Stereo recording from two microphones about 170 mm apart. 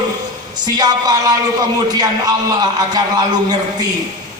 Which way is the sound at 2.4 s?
25° right (ahead or behind).